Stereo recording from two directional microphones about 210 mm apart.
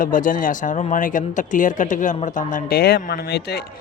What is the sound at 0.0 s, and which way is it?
Speech, 40° left (ahead or behind).